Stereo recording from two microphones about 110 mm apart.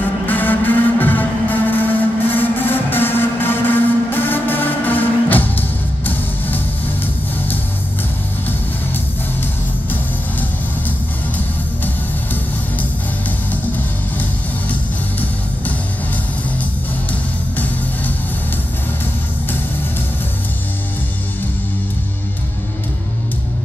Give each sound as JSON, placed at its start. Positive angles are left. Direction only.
{"t": 0.3, "sound": "music", "side_deg": 15}
{"t": 14.7, "sound": "music", "side_deg": 15}